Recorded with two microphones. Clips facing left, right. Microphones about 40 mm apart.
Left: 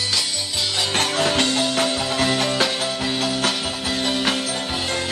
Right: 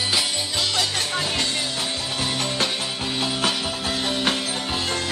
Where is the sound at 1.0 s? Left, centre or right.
Left.